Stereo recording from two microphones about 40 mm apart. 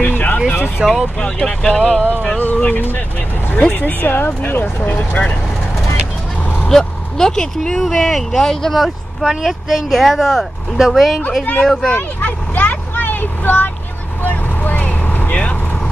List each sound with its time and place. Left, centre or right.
0.0 s vehicle: left
0.8 s speech: centre
1.2 s speech: centre
2.3 s speech: left
4.9 s speech: left
6.7 s speech: centre
8.7 s speech: centre
11.6 s speech: centre
12.2 s vehicle: left